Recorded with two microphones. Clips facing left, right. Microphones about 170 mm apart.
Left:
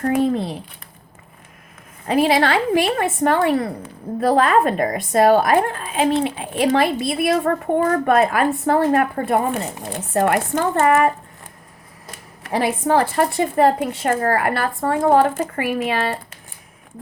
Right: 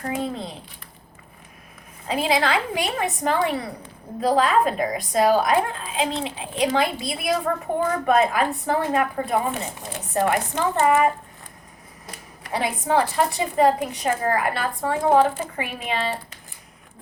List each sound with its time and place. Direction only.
0.0 s speech: 65° left (ahead or behind)
2.0 s a woman's voice: 55° left (ahead or behind)
12.4 s a woman's voice: 60° left (ahead or behind)